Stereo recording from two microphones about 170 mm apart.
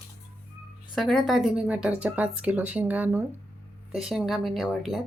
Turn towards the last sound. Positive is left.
turn(degrees=0)  # may be behind; listen again after turning